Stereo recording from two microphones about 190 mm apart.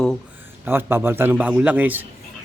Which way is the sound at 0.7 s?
10° right (ahead or behind).